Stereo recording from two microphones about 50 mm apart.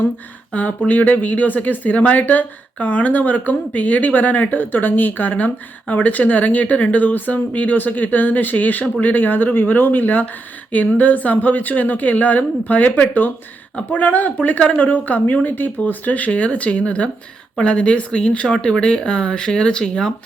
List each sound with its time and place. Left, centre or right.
0.9 s speech: left; by 20.1 s centre